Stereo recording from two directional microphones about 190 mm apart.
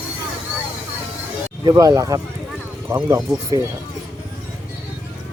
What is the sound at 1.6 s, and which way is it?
Speech, 20° right (ahead or behind).